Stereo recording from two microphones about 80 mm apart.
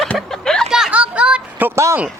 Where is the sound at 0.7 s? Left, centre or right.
Centre.